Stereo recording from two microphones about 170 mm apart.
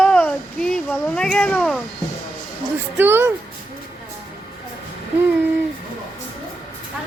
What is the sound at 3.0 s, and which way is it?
Speech, 15° right (ahead or behind).